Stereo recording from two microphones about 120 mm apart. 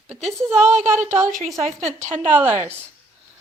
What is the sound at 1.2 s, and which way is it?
Speech, 90° right.